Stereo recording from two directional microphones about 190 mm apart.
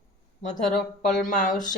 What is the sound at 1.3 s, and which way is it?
Speech, 45° left (ahead or behind).